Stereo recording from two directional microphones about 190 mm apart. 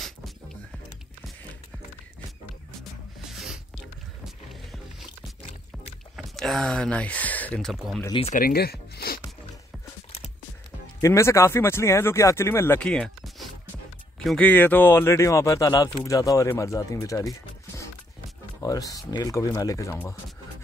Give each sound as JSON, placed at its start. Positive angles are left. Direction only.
{"t": 2.8, "sound": "music", "side_deg": 0}
{"t": 6.1, "sound": "speech", "side_deg": 0}
{"t": 8.1, "sound": "speech", "side_deg": 30}
{"t": 8.4, "sound": "zipper", "side_deg": 50}
{"t": 11.0, "sound": "speech", "side_deg": 15}